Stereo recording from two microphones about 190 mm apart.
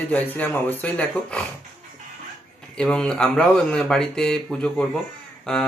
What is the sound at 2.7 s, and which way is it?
A man's voice, 5° left (ahead or behind).